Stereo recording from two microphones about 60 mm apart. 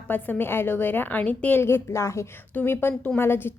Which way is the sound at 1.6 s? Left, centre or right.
Left.